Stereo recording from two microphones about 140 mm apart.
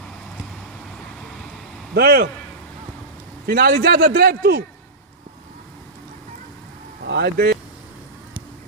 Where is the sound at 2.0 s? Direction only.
90° right.